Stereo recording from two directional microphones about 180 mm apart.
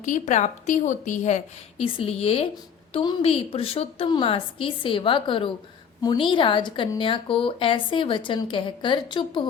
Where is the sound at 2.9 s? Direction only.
30° left (ahead or behind).